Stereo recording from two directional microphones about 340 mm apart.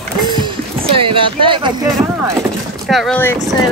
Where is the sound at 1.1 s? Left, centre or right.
Centre.